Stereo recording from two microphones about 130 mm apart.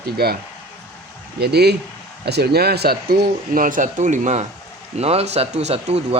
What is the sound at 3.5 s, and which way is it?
Speech, 90° right.